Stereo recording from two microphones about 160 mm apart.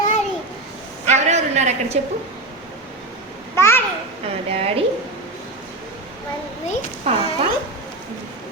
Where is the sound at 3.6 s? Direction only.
15° left (ahead or behind).